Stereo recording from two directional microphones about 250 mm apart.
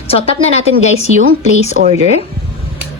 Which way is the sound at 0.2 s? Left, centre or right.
Left.